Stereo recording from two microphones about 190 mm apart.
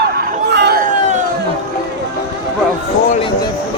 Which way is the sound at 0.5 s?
60° right (ahead or behind).